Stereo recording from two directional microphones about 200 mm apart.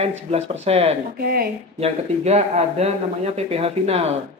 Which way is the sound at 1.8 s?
35° right (ahead or behind).